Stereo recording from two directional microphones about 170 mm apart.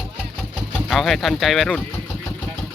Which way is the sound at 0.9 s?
Centre (ahead or behind).